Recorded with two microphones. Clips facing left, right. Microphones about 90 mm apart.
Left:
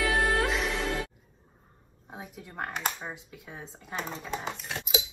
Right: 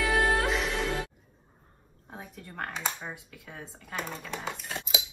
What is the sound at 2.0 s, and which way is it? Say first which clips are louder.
A woman's voice: left 1 dB; 15° left (ahead or behind).